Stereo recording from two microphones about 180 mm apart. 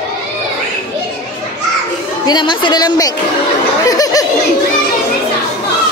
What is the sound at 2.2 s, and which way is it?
Speech, 25° left (ahead or behind).